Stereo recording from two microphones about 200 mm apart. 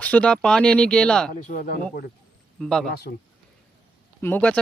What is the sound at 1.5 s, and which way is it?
Speech, 45° left (ahead or behind).